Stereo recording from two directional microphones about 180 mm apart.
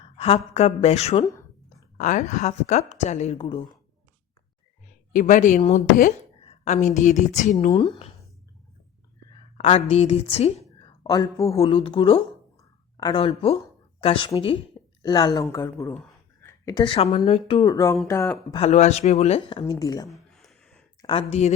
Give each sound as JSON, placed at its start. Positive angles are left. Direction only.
{"t": 0.0, "sound": "a woman's voice", "side_deg": 30}
{"t": 5.1, "sound": "a woman's voice", "side_deg": 45}
{"t": 7.7, "sound": "a woman's voice", "side_deg": 30}
{"t": 9.6, "sound": "a woman's voice", "side_deg": 30}
{"t": 11.0, "sound": "a woman's voice", "side_deg": 20}
{"t": 11.5, "sound": "a woman's voice", "side_deg": 30}
{"t": 12.5, "sound": "a sound", "side_deg": 20}
{"t": 14.0, "sound": "a woman's voice", "side_deg": 30}
{"t": 17.7, "sound": "a woman's voice", "side_deg": 20}
{"t": 18.5, "sound": "a woman's voice", "side_deg": 35}
{"t": 19.8, "sound": "a woman's voice", "side_deg": 20}
{"t": 20.1, "sound": "a sound", "side_deg": 0}
{"t": 21.0, "sound": "a woman's voice", "side_deg": 30}